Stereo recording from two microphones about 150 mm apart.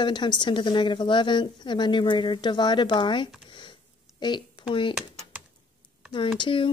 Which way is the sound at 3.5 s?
30° left (ahead or behind).